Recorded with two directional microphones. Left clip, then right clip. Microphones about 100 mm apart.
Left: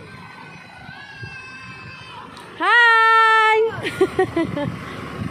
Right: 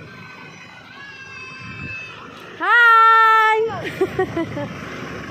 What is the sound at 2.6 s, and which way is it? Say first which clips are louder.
Baby cry: right 2 dB; 55° left (ahead or behind).